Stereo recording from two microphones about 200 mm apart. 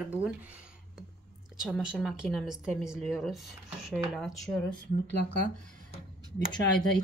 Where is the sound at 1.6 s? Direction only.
5° right (ahead or behind).